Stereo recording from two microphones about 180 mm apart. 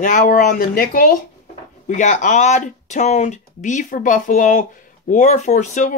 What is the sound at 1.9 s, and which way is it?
Speech, 40° left (ahead or behind).